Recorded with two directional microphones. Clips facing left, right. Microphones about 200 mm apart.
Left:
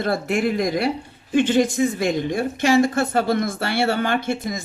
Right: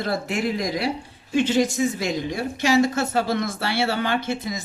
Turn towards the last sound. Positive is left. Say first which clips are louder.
# left 2 dB
turn(degrees=50)  # may be behind; listen again after turning